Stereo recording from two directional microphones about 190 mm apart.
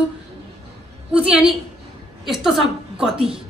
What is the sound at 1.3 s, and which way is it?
A woman's voice, 5° right (ahead or behind).